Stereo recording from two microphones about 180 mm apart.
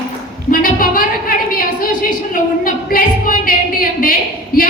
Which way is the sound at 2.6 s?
50° left (ahead or behind).